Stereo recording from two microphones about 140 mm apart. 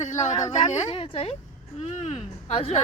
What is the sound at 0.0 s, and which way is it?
Speech, 60° left (ahead or behind).